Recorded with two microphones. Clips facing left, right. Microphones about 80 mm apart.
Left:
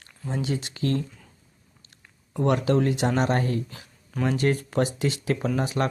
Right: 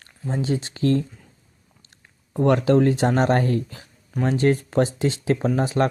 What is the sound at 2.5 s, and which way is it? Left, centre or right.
Speech, right.